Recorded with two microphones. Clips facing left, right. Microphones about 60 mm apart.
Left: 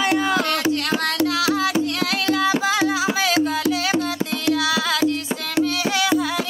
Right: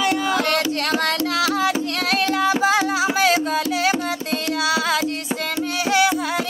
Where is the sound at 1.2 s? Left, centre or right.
Right.